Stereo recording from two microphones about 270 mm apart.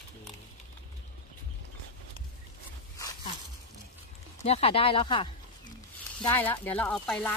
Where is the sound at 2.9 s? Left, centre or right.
Centre.